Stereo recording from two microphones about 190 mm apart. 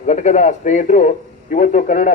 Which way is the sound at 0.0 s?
40° left (ahead or behind).